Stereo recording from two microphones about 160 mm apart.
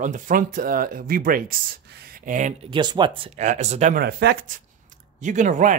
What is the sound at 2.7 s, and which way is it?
Speech, 30° right (ahead or behind).